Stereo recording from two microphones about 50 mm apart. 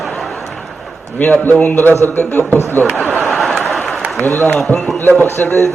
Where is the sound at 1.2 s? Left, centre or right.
Left.